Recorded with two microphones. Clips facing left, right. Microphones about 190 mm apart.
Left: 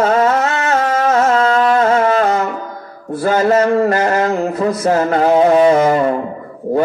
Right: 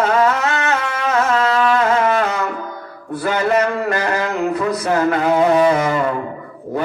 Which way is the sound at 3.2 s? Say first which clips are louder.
Left 4 dB; 35° left (ahead or behind).